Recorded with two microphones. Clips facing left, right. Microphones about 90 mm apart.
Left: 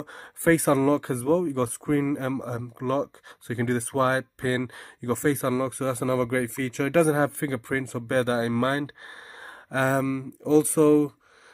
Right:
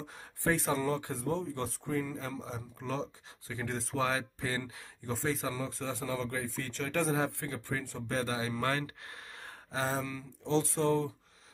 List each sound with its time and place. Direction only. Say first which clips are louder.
0.0 s speech: left 7 dB; 55° left (ahead or behind)
0.4 s speech: left 10 dB; 80° left
2.1 s speech: left 11 dB; 50° left (ahead or behind); by 4.0 s 65° left (ahead or behind)
4.0 s speech: left 8 dB; 40° left (ahead or behind)
4.4 s speech: left 9 dB; 60° left (ahead or behind); by 7.2 s 90° left
7.2 s speech: left 9 dB; 75° left (ahead or behind)
8.2 s speech: left 11 dB; 50° left (ahead or behind)
8.6 s speech: left 7 dB; 35° left (ahead or behind)
9.7 s speech: left 10 dB; 65° left (ahead or behind)
10.7 s speech: left 11 dB; 90° left